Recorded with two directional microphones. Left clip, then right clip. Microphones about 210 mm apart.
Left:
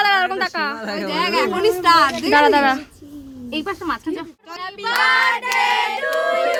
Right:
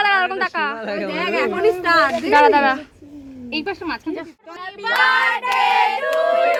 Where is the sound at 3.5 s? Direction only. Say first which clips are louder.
Left 1 dB; 10° left (ahead or behind).